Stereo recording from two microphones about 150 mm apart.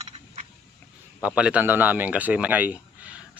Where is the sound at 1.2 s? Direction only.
5° right (ahead or behind).